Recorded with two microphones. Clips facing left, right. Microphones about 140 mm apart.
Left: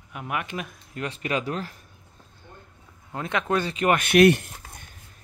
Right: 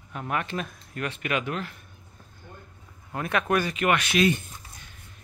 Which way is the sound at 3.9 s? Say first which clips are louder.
Left 7 dB; 55° left (ahead or behind).